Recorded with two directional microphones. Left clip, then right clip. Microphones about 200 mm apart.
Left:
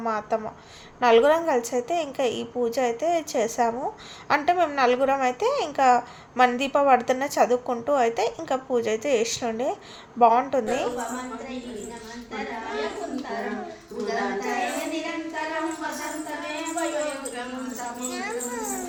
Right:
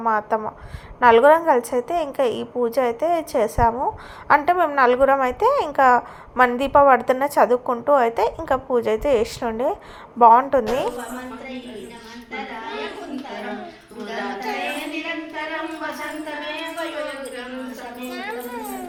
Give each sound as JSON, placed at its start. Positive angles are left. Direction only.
{"t": 0.0, "sound": "a woman's voice", "side_deg": -10}
{"t": 14.3, "sound": "child singing", "side_deg": -20}